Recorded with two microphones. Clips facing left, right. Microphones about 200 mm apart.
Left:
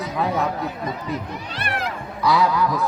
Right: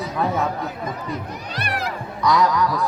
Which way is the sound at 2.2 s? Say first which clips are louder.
Even; 10° left (ahead or behind).